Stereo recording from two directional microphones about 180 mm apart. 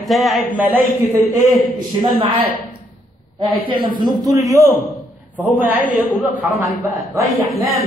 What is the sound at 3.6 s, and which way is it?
A man's voice, 25° right (ahead or behind).